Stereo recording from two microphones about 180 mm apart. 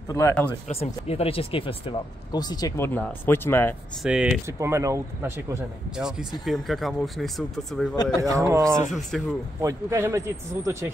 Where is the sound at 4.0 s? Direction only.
5° right (ahead or behind).